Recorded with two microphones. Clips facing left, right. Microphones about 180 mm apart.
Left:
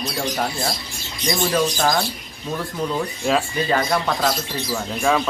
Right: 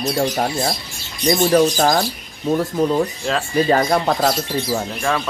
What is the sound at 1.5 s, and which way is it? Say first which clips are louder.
Speech: right 5 dB; 45° right (ahead or behind).